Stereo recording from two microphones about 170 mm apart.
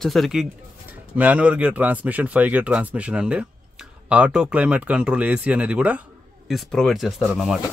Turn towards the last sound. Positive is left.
turn(degrees=0)  # may be behind; listen again after turning